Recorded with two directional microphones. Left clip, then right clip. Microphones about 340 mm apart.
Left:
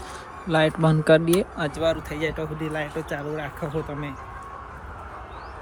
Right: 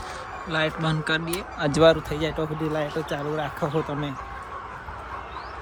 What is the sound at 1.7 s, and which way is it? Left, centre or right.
Speech, centre.